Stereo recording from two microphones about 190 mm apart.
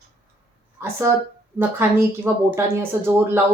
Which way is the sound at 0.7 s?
15° right (ahead or behind).